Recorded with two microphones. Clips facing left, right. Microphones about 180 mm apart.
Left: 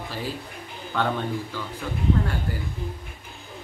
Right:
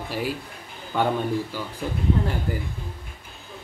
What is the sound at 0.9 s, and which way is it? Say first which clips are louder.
Speech: right 3 dB; 15° right (ahead or behind).